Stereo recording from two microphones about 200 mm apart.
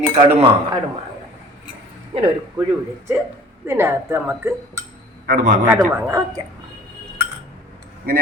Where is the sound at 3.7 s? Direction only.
10° right (ahead or behind).